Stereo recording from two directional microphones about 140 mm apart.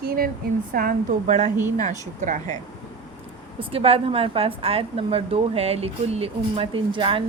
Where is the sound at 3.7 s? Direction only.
40° right (ahead or behind).